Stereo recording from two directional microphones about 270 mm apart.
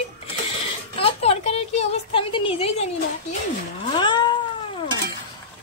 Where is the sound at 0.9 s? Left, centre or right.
Left.